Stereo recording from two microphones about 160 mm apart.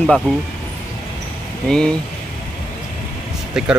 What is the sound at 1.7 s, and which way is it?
Speech, 5° left (ahead or behind).